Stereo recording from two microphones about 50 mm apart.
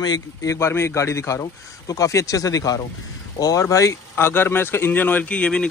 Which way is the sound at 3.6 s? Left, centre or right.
Left.